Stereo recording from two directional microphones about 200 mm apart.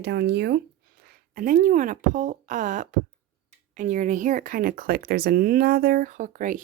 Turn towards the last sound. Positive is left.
turn(degrees=-40)  # may be behind; listen again after turning